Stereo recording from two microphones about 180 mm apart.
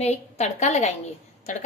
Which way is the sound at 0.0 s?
40° left (ahead or behind).